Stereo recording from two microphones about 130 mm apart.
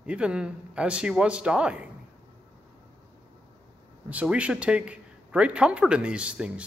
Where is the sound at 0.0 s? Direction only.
10° right (ahead or behind).